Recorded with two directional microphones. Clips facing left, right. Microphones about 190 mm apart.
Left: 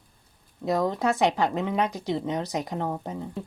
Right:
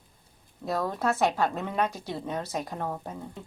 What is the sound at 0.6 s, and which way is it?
Speech, 15° left (ahead or behind).